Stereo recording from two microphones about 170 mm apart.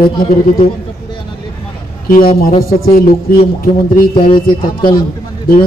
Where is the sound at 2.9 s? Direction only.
55° left (ahead or behind).